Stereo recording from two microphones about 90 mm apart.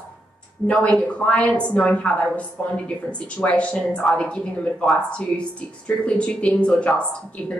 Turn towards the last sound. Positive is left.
turn(degrees=10)  # may be behind; listen again after turning